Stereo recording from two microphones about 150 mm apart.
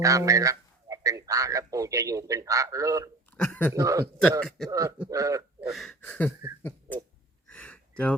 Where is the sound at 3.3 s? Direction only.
10° left (ahead or behind).